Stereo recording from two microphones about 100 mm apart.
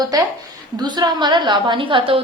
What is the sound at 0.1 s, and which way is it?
A woman's voice, 35° right (ahead or behind).